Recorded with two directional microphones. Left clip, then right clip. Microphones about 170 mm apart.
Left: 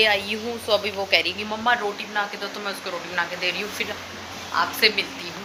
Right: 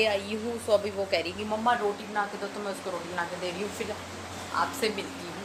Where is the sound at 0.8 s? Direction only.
15° right (ahead or behind).